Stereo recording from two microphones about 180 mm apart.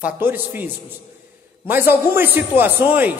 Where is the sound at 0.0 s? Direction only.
10° right (ahead or behind).